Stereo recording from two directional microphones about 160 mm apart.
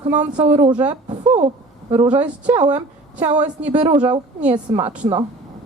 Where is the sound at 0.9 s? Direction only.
30° right (ahead or behind).